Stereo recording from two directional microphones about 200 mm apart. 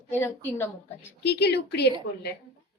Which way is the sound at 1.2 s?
55° left (ahead or behind).